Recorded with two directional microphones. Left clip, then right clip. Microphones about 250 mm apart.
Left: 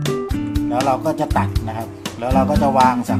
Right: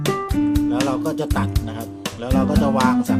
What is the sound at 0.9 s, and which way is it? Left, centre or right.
Music, centre.